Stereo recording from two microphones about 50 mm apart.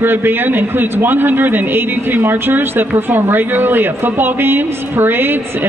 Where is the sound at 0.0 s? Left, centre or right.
Right.